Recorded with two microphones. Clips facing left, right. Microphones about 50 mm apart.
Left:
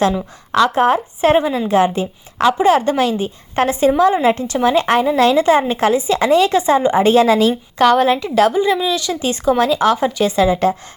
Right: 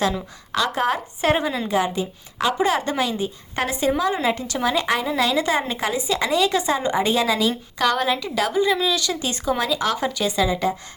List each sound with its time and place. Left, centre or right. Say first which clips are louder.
0.2 s a woman's voice: left 9 dB; left
1.6 s a woman's voice: left 7 dB; left
8.5 s speech: left 4 dB; left